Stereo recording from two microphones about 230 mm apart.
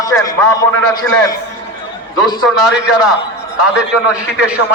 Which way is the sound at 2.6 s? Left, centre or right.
Centre.